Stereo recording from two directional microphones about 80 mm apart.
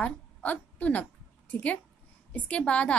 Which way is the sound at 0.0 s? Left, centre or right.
Centre.